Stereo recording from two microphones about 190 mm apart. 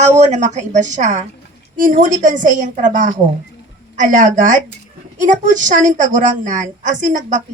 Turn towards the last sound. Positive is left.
turn(degrees=-40)  # may be behind; listen again after turning